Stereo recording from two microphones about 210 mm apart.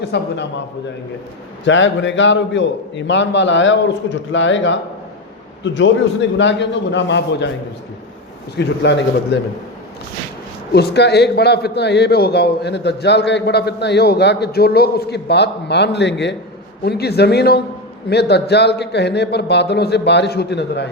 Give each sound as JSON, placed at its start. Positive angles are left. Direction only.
{"t": 0.0, "sound": "a man's voice", "side_deg": 55}
{"t": 1.6, "sound": "a man's voice", "side_deg": 60}
{"t": 8.5, "sound": "a man's voice", "side_deg": 55}
{"t": 10.7, "sound": "a man's voice", "side_deg": 50}